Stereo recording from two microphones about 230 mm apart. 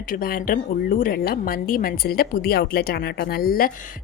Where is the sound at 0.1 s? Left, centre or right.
Left.